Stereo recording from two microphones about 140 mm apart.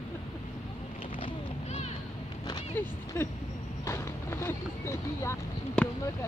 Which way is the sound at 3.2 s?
20° left (ahead or behind).